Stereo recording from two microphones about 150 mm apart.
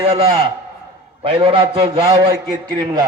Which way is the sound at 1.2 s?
35° right (ahead or behind).